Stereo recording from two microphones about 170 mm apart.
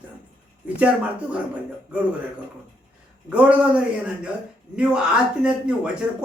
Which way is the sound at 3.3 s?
5° right (ahead or behind).